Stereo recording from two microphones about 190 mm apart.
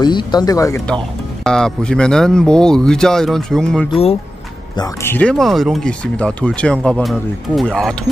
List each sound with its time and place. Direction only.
0.0 s speech: 20° left (ahead or behind)
1.4 s speech: 5° left (ahead or behind)
3.9 s speech: 30° left (ahead or behind)
4.7 s speech: 15° left (ahead or behind)